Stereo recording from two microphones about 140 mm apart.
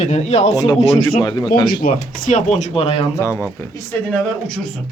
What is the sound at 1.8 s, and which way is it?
Speech, 60° left (ahead or behind).